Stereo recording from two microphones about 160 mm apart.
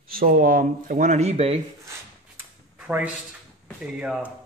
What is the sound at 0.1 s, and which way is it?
Speech, 60° right (ahead or behind).